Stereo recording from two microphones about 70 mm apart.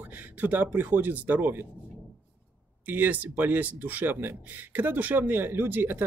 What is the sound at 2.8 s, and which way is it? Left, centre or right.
Speech, right.